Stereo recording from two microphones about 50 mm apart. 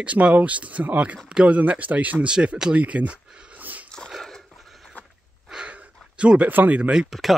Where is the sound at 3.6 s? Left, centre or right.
Right.